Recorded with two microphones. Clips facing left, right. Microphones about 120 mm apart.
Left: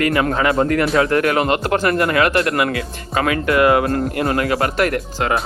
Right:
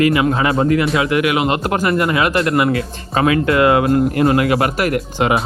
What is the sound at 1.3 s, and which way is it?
Speech, 15° right (ahead or behind).